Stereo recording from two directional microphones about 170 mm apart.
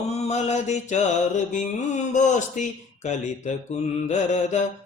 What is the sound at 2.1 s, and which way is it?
Mantra, 45° left (ahead or behind).